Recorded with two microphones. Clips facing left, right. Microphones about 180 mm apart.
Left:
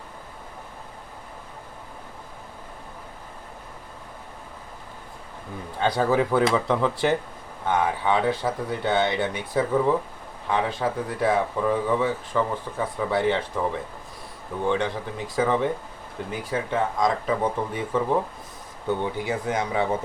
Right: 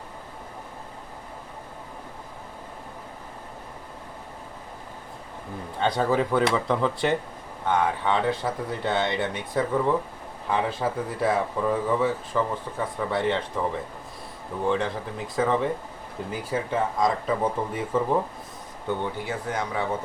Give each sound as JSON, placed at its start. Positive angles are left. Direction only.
{"t": 5.8, "sound": "speech", "side_deg": 5}
{"t": 14.7, "sound": "speech", "side_deg": 0}
{"t": 18.9, "sound": "speech", "side_deg": 15}